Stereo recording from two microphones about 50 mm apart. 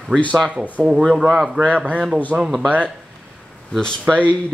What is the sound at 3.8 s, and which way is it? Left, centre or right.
Speech, centre.